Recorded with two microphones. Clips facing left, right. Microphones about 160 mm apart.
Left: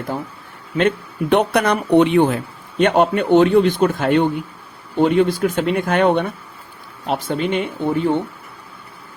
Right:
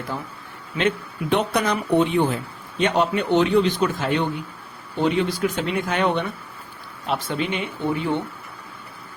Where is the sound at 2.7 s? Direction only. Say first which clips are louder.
Left 5 dB; 55° left (ahead or behind).